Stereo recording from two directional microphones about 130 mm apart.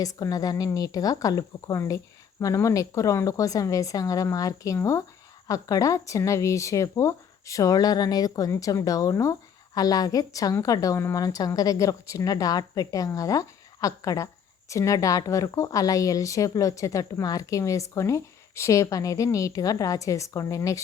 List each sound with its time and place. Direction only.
0.0 s a woman's voice: 25° left (ahead or behind)